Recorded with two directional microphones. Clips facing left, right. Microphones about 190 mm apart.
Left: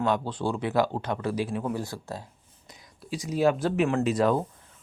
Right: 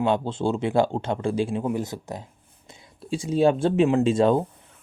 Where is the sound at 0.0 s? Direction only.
25° right (ahead or behind).